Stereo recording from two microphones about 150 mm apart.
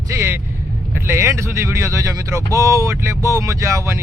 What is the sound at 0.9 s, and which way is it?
Speech, 15° right (ahead or behind).